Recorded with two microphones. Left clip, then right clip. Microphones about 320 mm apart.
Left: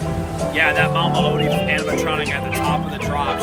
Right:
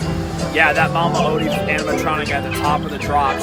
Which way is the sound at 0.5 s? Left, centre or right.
Centre.